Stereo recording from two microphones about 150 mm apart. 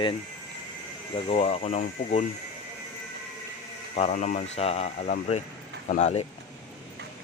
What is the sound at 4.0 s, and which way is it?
Speech, 50° left (ahead or behind).